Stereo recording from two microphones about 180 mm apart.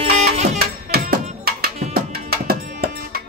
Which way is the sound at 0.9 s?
55° right (ahead or behind).